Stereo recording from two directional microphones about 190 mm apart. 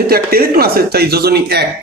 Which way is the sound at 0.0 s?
55° right (ahead or behind).